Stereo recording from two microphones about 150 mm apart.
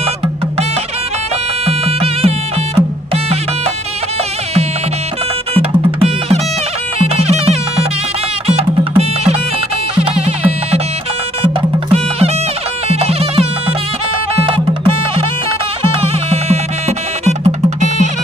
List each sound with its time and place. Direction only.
1.7 s music: 40° right (ahead or behind)
5.5 s music: 40° right (ahead or behind)